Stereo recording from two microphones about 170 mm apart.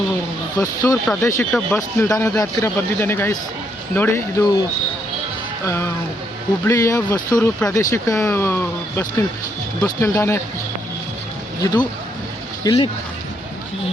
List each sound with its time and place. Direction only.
0.6 s speech: 20° left (ahead or behind)
5.6 s speech: 15° left (ahead or behind)
11.6 s speech: 25° left (ahead or behind)